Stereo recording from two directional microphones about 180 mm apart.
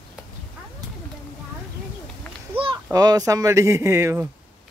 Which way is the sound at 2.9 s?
20° right (ahead or behind).